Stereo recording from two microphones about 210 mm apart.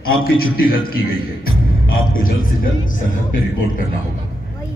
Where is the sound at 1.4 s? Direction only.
45° left (ahead or behind).